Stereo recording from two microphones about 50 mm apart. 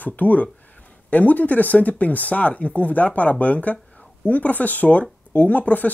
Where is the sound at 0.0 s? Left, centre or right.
Left.